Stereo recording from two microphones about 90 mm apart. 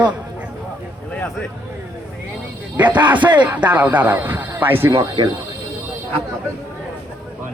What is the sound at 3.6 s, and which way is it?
Speech, 15° right (ahead or behind).